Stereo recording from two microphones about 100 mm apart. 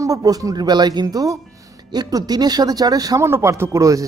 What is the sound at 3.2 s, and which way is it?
Speech, 25° right (ahead or behind).